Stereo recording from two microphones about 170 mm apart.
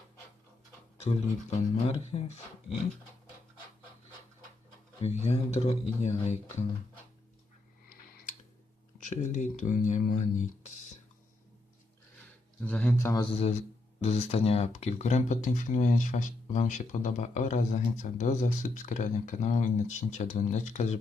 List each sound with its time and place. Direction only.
0.9 s speech: 40° left (ahead or behind)
4.9 s speech: 40° left (ahead or behind)
9.0 s speech: 45° left (ahead or behind)
12.5 s speech: 5° left (ahead or behind)
13.4 s speech: 40° left (ahead or behind)